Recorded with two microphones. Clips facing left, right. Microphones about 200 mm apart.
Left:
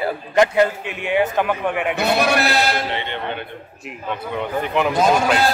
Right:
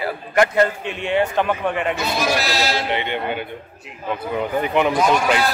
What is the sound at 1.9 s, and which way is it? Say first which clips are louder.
Speech: left 3 dB; 65° left (ahead or behind).